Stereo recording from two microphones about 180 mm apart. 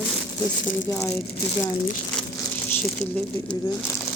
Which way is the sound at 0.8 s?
15° left (ahead or behind).